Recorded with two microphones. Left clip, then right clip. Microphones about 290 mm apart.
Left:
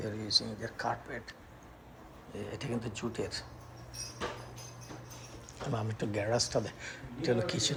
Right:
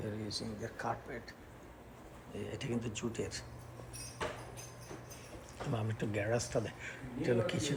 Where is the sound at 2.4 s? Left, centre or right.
Left.